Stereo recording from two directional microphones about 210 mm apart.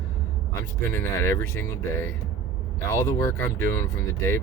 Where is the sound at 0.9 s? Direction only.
10° left (ahead or behind).